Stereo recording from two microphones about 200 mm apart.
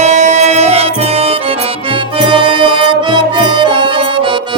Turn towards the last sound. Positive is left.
turn(degrees=-25)  # may be behind; listen again after turning